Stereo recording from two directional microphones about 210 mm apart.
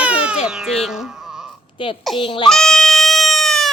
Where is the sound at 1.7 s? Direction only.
25° left (ahead or behind).